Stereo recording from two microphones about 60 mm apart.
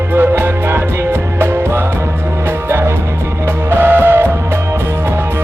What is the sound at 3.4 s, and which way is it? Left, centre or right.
Music, right.